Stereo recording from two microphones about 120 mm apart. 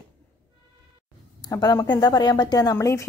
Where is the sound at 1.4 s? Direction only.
35° left (ahead or behind).